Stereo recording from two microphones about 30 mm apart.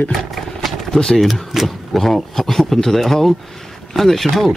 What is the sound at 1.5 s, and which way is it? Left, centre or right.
Speech, centre.